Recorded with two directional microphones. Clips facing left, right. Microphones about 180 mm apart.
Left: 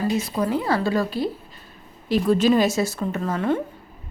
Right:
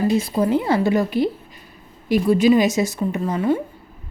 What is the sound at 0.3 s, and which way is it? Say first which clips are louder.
A woman's voice: right 4 dB; 25° right (ahead or behind).